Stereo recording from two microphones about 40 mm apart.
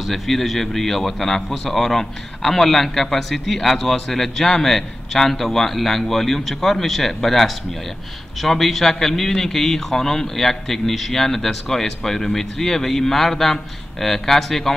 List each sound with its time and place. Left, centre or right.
0.0 s a man's voice: centre